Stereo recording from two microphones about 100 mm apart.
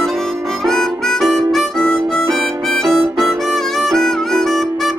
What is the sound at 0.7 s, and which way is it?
Harmonica, 5° left (ahead or behind).